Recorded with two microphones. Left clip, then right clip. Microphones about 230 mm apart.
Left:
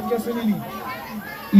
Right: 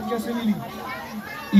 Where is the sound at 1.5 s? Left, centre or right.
Right.